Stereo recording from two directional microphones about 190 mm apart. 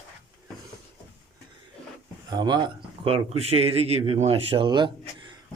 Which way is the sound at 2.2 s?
20° right (ahead or behind).